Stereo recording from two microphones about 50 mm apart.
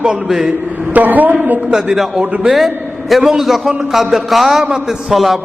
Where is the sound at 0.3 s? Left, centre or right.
Centre.